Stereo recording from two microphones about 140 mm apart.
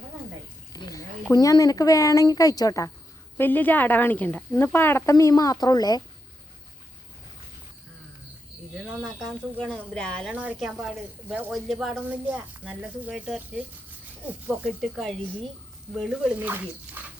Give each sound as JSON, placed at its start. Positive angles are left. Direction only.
{"t": 0.7, "sound": "a sound", "side_deg": 25}
{"t": 1.3, "sound": "speech", "side_deg": 25}
{"t": 3.3, "sound": "speech", "side_deg": 15}
{"t": 8.9, "sound": "speech", "side_deg": 0}
{"t": 10.3, "sound": "speech", "side_deg": -10}
{"t": 11.5, "sound": "speech", "side_deg": 0}
{"t": 12.0, "sound": "speech", "side_deg": -10}
{"t": 16.3, "sound": "speech", "side_deg": -15}